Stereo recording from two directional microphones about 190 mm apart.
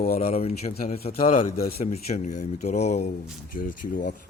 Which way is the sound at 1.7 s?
35° left (ahead or behind).